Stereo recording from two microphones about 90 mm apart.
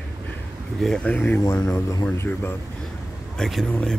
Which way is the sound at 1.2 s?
25° left (ahead or behind).